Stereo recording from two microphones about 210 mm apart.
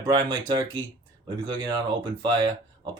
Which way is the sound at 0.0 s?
20° right (ahead or behind).